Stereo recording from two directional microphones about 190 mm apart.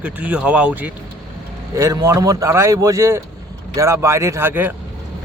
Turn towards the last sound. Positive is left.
turn(degrees=-10)  # may be behind; listen again after turning